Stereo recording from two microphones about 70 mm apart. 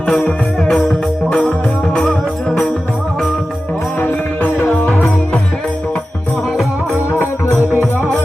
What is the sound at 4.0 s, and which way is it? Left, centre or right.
Music, left.